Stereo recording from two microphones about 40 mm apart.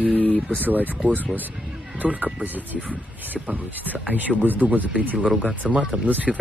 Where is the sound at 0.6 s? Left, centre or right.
Right.